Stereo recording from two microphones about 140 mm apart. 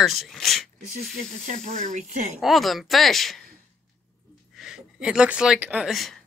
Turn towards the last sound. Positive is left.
turn(degrees=0)  # may be behind; listen again after turning